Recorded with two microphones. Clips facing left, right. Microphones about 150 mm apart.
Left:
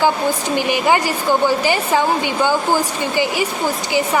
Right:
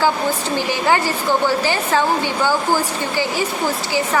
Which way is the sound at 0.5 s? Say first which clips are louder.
Left 2 dB; 15° left (ahead or behind).